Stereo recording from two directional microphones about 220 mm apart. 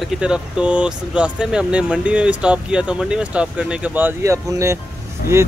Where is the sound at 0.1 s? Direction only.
5° right (ahead or behind).